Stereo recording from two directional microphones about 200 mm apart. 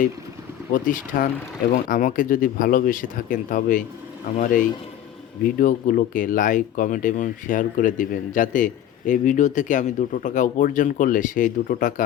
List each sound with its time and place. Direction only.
0.7 s speech: 40° left (ahead or behind)